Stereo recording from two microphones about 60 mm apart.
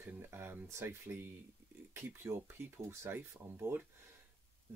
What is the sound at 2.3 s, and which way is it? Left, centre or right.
Speech, right.